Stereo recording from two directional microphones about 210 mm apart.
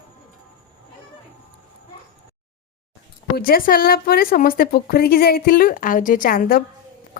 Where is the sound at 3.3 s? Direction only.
45° left (ahead or behind).